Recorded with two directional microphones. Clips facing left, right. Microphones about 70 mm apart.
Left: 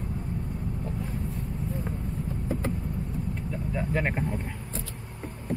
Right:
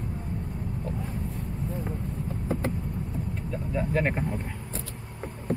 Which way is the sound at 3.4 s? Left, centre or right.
Centre.